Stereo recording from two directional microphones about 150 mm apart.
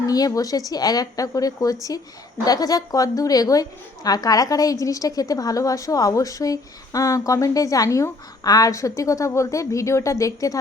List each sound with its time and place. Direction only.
0.1 s a woman's voice: 25° left (ahead or behind)